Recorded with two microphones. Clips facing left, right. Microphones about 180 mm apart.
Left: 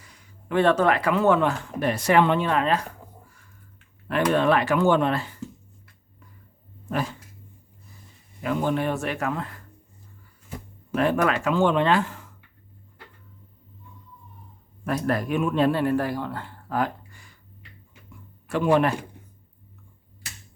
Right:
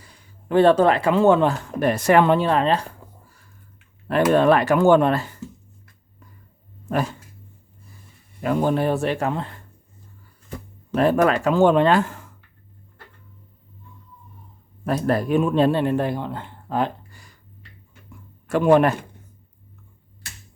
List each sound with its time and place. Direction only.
0.0 s speech: 30° right (ahead or behind)
1.8 s speech: 50° right (ahead or behind); by 2.8 s 30° right (ahead or behind)
4.3 s speech: 45° right (ahead or behind)
8.4 s speech: 40° right (ahead or behind)
10.9 s speech: 35° right (ahead or behind)
14.8 s speech: 30° right (ahead or behind)
18.4 s speech: 45° right (ahead or behind)